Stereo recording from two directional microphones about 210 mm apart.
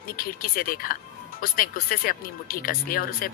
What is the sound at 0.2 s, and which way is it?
Speech, 45° left (ahead or behind).